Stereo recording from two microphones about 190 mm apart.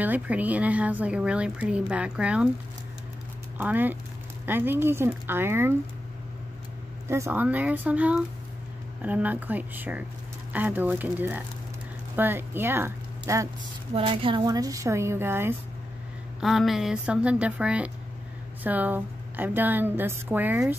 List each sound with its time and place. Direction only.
0.0 s a woman's voice: 10° right (ahead or behind)
3.5 s a woman's voice: 10° right (ahead or behind)
7.1 s a woman's voice: 15° right (ahead or behind)
13.9 s a woman's voice: 25° right (ahead or behind); by 15.5 s 10° right (ahead or behind)
16.3 s a woman's voice: centre (ahead or behind)